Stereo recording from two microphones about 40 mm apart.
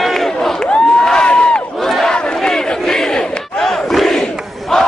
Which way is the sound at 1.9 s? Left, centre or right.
Centre.